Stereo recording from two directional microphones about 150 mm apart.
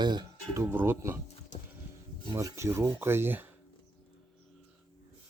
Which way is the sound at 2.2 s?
20° right (ahead or behind).